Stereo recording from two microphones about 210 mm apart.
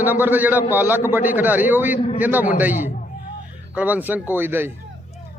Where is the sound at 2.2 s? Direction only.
10° right (ahead or behind).